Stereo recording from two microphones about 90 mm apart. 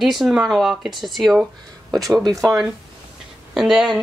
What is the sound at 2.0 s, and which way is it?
Speech, 40° right (ahead or behind).